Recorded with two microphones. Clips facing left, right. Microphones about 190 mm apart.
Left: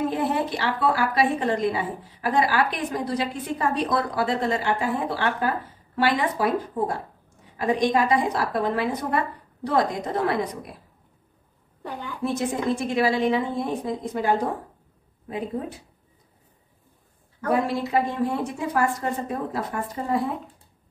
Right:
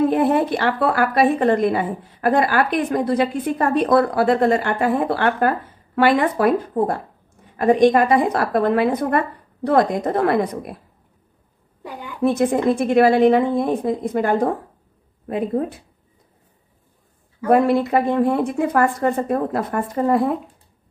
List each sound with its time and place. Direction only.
0.1 s a woman's voice: 55° right (ahead or behind)
11.8 s a woman's voice: 10° right (ahead or behind)
12.2 s a woman's voice: 55° right (ahead or behind)
17.5 s a woman's voice: 55° right (ahead or behind)